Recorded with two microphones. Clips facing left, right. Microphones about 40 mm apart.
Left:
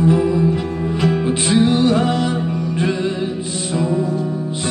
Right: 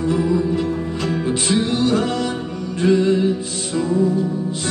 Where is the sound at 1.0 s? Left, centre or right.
Centre.